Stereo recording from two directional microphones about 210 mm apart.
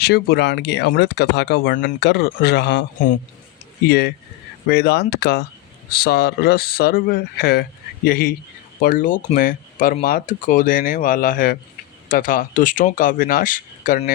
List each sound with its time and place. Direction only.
0.0 s speech: 50° left (ahead or behind)
3.8 s speech: 50° left (ahead or behind)